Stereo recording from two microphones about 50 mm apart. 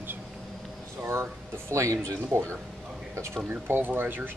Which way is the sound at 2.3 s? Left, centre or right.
Right.